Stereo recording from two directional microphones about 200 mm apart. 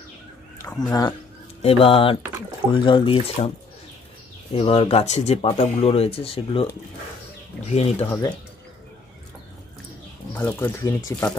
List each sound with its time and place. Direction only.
0.6 s speech: 15° left (ahead or behind)
1.6 s speech: 30° left (ahead or behind)
4.6 s speech: 25° left (ahead or behind)
8.0 s speech: 10° left (ahead or behind)
10.3 s speech: 10° left (ahead or behind)